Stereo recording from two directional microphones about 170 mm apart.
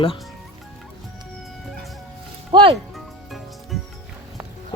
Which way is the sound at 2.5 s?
25° right (ahead or behind).